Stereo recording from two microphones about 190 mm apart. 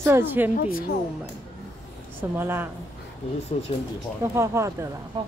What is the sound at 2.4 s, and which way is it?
Speech, 10° right (ahead or behind).